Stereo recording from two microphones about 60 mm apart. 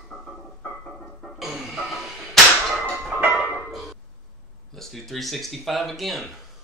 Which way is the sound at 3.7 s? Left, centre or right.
Centre.